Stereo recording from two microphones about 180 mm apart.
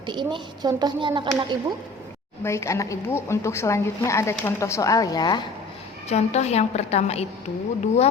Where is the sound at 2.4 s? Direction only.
15° left (ahead or behind).